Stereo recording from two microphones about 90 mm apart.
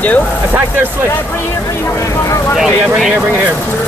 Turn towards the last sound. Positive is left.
turn(degrees=-5)  # may be behind; listen again after turning